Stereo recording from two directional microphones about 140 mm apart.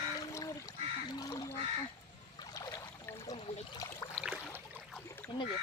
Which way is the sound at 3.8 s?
25° left (ahead or behind).